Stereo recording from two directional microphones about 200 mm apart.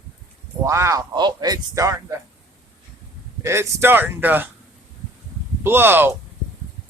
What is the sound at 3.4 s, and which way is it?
Speech, 15° right (ahead or behind).